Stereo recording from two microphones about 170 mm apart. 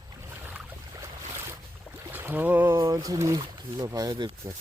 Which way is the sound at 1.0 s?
15° right (ahead or behind).